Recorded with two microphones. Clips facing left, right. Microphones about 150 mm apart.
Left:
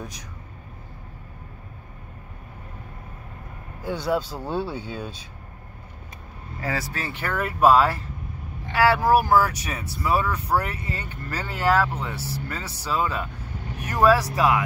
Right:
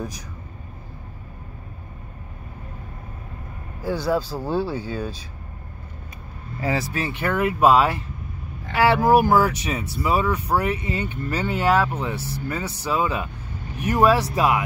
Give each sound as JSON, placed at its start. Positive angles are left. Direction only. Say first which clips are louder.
{"t": 3.8, "sound": "speech", "louder": "right 2 dB", "side_deg": -5}
{"t": 6.6, "sound": "speech", "louder": "right 5 dB", "side_deg": -25}